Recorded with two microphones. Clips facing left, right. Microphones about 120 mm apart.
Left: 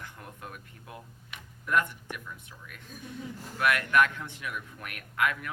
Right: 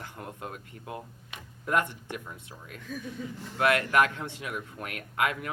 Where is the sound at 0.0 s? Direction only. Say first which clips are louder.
Right 4 dB; 25° right (ahead or behind).